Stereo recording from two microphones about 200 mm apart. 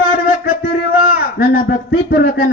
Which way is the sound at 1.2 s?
50° left (ahead or behind).